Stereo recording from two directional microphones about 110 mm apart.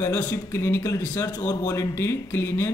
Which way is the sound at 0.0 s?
20° left (ahead or behind).